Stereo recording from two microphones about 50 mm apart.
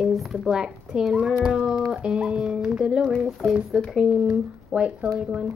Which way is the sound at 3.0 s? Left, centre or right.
Centre.